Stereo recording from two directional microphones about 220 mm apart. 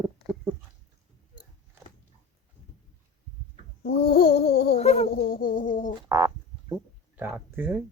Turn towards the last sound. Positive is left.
turn(degrees=-10)  # may be behind; listen again after turning